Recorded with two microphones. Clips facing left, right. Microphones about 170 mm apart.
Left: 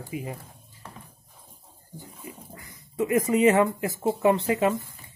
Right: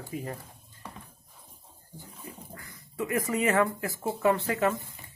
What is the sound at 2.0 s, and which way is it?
Speech, 15° left (ahead or behind).